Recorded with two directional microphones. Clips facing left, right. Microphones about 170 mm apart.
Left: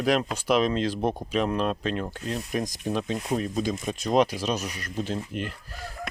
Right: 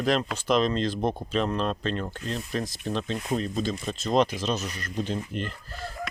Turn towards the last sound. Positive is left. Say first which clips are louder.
# even
turn(degrees=10)  # may be behind; listen again after turning